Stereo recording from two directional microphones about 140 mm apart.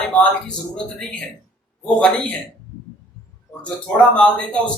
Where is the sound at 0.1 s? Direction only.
10° left (ahead or behind).